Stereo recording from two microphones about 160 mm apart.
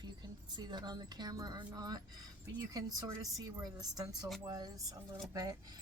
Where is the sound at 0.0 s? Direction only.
25° right (ahead or behind).